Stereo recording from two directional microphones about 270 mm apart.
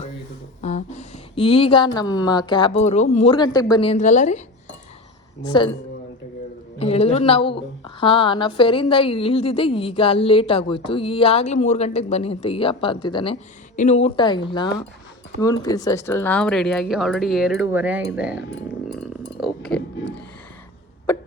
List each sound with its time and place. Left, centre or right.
0.6 s speech: left
5.4 s speech: centre
6.7 s a woman's voice: left; by 18.4 s centre
18.9 s chink: centre
21.1 s hiccup: centre